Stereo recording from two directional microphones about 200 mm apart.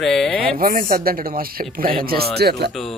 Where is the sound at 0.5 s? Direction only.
45° right (ahead or behind).